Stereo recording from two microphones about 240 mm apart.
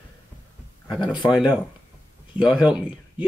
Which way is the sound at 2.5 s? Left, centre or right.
Centre.